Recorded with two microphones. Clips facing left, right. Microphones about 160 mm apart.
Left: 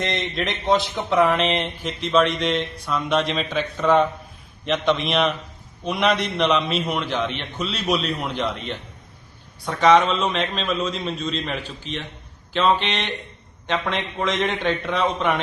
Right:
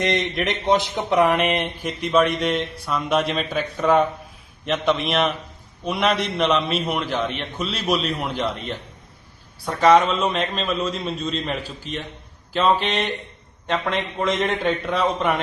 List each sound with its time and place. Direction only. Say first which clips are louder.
0.0 s a man's voice: right 3 dB; 15° right (ahead or behind)